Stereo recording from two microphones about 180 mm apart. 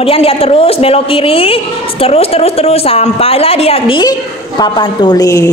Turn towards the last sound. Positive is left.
turn(degrees=20)  # may be behind; listen again after turning